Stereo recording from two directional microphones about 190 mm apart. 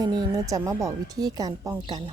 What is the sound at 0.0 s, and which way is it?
A woman's voice, 20° right (ahead or behind).